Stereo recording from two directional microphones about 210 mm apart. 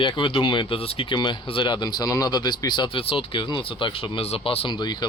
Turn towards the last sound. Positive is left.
turn(degrees=20)  # may be behind; listen again after turning